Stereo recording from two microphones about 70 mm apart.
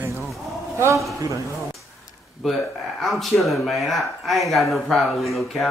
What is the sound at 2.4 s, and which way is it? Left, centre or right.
A man's voice, centre.